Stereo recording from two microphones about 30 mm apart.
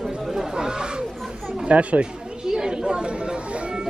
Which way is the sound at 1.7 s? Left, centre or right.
Right.